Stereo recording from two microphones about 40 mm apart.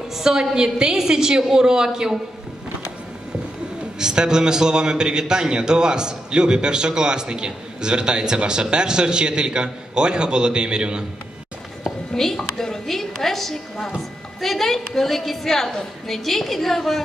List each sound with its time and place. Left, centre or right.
0.1 s a woman's voice: centre
4.0 s a man's voice: centre
12.1 s a woman's voice: centre